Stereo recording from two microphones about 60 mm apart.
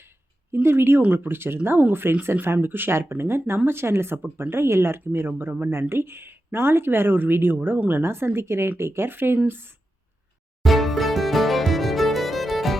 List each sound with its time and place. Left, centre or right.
0.5 s speech: right
10.6 s music: centre